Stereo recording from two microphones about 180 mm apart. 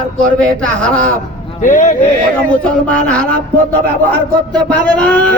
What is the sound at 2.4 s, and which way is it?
Speech, 5° left (ahead or behind).